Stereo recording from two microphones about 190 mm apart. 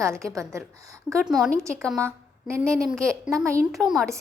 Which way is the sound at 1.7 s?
5° left (ahead or behind).